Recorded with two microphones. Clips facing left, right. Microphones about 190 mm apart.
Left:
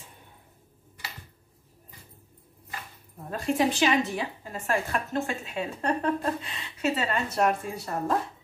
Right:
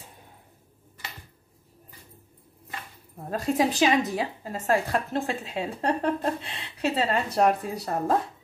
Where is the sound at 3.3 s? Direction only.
40° right (ahead or behind).